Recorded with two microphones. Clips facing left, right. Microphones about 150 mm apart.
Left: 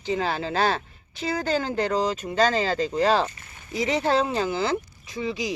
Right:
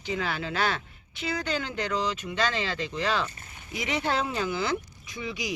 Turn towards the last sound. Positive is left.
turn(degrees=30)  # may be behind; listen again after turning